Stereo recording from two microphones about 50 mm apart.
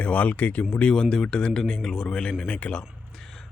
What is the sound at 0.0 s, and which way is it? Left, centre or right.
Speech, left.